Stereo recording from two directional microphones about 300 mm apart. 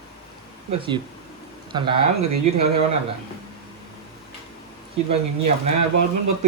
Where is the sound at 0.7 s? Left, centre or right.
Centre.